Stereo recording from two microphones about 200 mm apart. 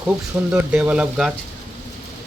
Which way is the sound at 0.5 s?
5° right (ahead or behind).